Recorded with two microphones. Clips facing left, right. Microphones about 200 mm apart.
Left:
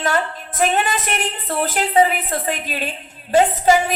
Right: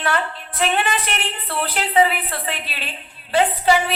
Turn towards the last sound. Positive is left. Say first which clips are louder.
# left 2 dB
turn(degrees=45)  # may be behind; listen again after turning